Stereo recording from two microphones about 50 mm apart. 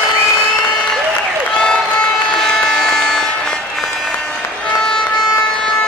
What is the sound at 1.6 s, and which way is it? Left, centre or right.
Vehicle, centre.